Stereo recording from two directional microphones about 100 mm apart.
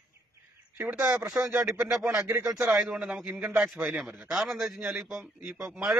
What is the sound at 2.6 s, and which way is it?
A man's voice, 5° right (ahead or behind).